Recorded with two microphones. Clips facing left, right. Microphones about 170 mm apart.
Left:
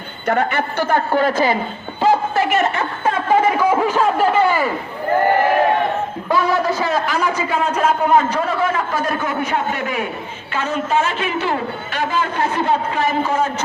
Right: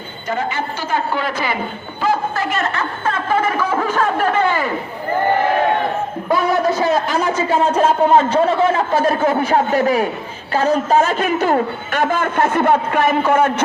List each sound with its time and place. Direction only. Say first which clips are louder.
0.3 s a woman's voice: left 3 dB; 65° left (ahead or behind); by 1.5 s 45° left (ahead or behind)
2.0 s a sound: left 3 dB; 25° left (ahead or behind); by 4.7 s 10° left (ahead or behind)
6.3 s a man's voice: right 1 dB; 20° right (ahead or behind); by 13.5 s 55° right (ahead or behind)